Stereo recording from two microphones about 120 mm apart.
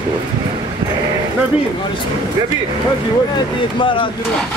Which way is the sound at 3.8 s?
45° left (ahead or behind).